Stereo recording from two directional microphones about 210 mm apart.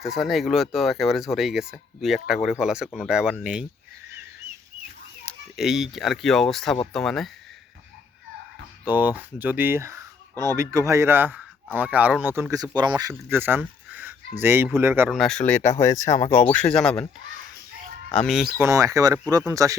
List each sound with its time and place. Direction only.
0.0 s speech: centre (ahead or behind)
5.5 s speech: centre (ahead or behind)
8.9 s speech: 10° right (ahead or behind)
15.1 s speech: centre (ahead or behind)
18.3 s speech: centre (ahead or behind)
18.6 s speech: 15° right (ahead or behind)